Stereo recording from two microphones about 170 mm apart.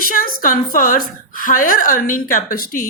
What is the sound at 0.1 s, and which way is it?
A woman's voice, 55° left (ahead or behind).